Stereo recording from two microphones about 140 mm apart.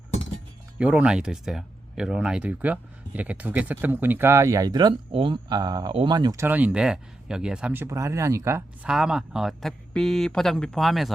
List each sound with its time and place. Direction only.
0.8 s speech: 10° right (ahead or behind); by 6.3 s 30° right (ahead or behind)
6.3 s speech: 15° right (ahead or behind)
8.8 s speech: 5° right (ahead or behind)